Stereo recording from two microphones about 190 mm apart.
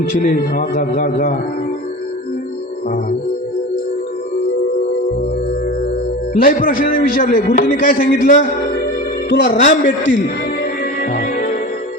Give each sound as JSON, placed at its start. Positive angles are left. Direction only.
{"t": 0.1, "sound": "a man's voice", "side_deg": 45}
{"t": 6.3, "sound": "a man's voice", "side_deg": 45}
{"t": 11.0, "sound": "music", "side_deg": 45}